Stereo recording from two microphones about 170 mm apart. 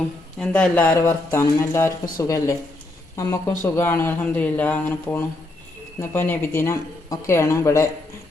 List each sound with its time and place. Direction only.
0.3 s speech: 5° left (ahead or behind)